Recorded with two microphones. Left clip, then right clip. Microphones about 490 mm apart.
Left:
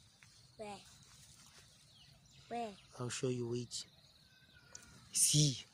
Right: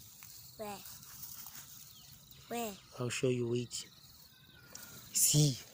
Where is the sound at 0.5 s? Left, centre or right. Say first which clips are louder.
Right 4 dB; left.